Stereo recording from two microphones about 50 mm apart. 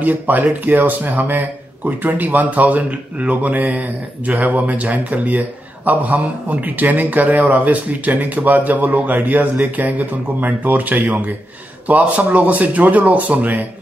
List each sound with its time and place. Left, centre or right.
0.0 s speech: right